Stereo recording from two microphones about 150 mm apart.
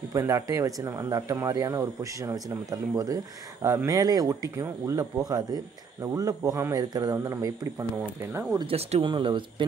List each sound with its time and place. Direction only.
0.1 s speech: 20° right (ahead or behind)
8.5 s speech: 40° right (ahead or behind)